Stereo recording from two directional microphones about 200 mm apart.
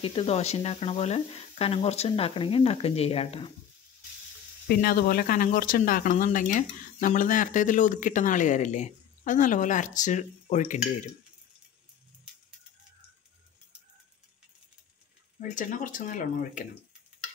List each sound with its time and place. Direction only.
0.0 s speech: 30° left (ahead or behind)
4.6 s speech: 45° left (ahead or behind)
15.4 s speech: 40° left (ahead or behind)